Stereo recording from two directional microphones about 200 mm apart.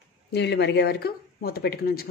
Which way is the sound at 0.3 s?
55° left (ahead or behind).